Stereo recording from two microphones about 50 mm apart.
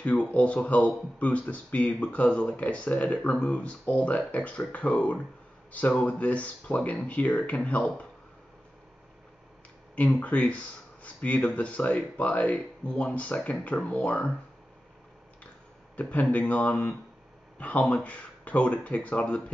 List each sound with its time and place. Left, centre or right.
0.0 s speech: left
10.1 s speech: left
16.0 s speech: left